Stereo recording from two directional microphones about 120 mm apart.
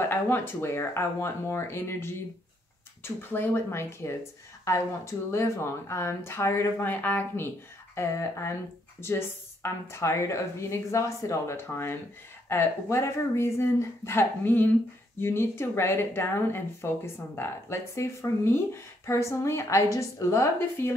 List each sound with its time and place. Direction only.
0.0 s speech: 20° left (ahead or behind)